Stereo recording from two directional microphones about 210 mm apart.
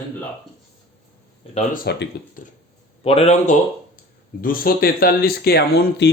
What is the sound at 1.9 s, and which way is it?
Speech, 50° left (ahead or behind).